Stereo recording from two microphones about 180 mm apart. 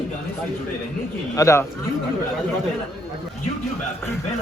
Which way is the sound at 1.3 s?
15° left (ahead or behind).